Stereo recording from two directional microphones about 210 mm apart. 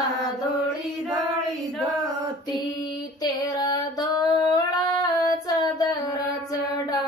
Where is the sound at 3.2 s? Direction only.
20° left (ahead or behind).